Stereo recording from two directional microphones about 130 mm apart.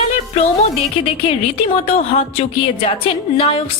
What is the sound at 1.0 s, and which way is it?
A woman's voice, 45° left (ahead or behind).